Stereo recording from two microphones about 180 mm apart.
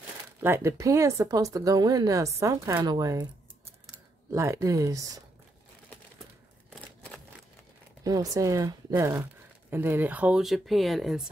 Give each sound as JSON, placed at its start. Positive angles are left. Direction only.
{"t": 0.4, "sound": "speech", "side_deg": -15}
{"t": 4.3, "sound": "speech", "side_deg": -15}
{"t": 6.7, "sound": "scissors", "side_deg": 5}
{"t": 8.0, "sound": "speech", "side_deg": -20}